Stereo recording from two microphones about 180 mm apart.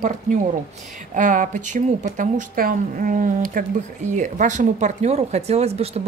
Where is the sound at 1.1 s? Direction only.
45° right (ahead or behind).